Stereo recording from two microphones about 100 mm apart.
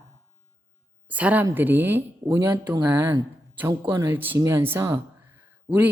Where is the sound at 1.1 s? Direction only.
15° right (ahead or behind).